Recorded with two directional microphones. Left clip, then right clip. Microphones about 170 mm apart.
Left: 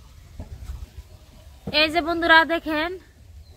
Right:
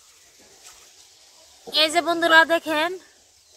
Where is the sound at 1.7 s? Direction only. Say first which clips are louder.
Right 1 dB; 50° right (ahead or behind).